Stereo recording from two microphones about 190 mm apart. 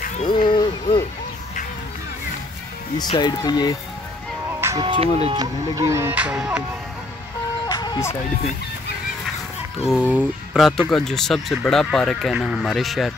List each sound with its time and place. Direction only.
0.3 s speech: 25° left (ahead or behind)
3.0 s speech: 20° left (ahead or behind)
4.5 s music: 15° right (ahead or behind)
4.8 s speech: 30° right (ahead or behind); by 6.6 s 5° right (ahead or behind)
7.6 s music: 20° left (ahead or behind)
9.8 s speech: 5° right (ahead or behind)